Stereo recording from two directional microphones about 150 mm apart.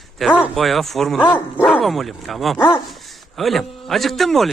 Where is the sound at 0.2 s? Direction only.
Centre (ahead or behind).